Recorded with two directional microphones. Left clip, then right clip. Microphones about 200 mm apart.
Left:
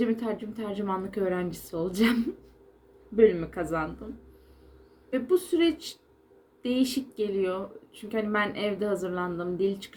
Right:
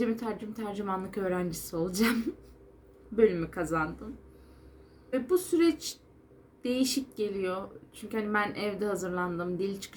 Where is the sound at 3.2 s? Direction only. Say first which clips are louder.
Left 4 dB; 10° right (ahead or behind).